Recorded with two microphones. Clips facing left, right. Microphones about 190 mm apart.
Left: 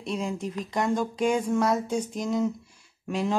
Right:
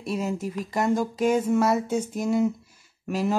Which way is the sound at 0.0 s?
5° right (ahead or behind).